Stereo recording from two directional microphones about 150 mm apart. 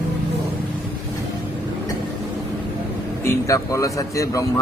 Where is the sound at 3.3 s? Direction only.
20° left (ahead or behind).